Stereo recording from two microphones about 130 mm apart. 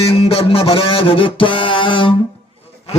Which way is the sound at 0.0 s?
50° left (ahead or behind).